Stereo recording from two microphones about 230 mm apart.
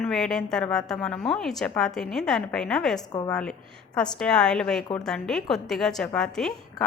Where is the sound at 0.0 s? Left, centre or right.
Centre.